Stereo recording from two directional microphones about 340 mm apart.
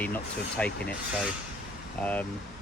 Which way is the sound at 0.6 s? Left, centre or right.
Centre.